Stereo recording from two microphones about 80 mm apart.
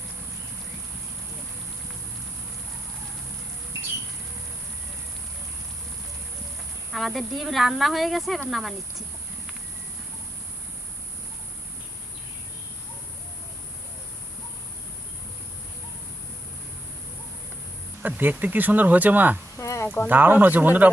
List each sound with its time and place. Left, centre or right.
6.9 s speech: centre
18.0 s speech: right
19.5 s a sound: left
20.1 s speech: right